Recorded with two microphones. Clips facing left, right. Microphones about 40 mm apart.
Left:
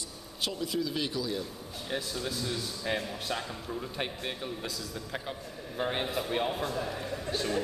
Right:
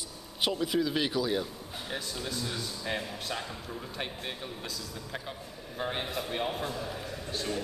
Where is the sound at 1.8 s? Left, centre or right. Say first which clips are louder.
Left 3 dB; centre.